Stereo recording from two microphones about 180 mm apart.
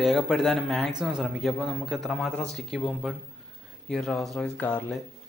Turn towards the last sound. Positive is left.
turn(degrees=10)  # may be behind; listen again after turning